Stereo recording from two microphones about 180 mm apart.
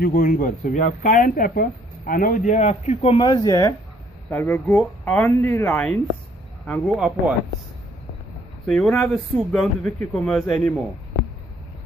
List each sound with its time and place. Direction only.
0.0 s speech: 45° left (ahead or behind)
3.3 s speech: 20° left (ahead or behind); by 7.3 s centre (ahead or behind)
8.6 s speech: 5° left (ahead or behind)